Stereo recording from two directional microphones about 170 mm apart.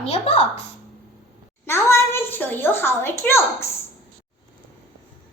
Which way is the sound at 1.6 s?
15° left (ahead or behind).